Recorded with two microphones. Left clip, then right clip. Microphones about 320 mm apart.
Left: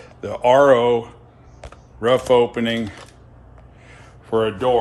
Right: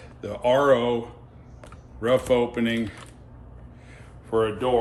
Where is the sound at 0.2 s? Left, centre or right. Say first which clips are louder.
Left 7 dB; left.